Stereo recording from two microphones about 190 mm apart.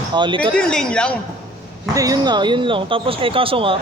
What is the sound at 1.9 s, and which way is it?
Speech, 20° right (ahead or behind).